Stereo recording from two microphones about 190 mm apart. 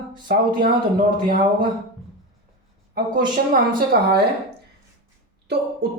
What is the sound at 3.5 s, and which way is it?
Speech, 50° right (ahead or behind).